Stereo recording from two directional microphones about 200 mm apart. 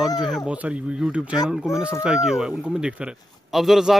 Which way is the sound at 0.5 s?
5° right (ahead or behind).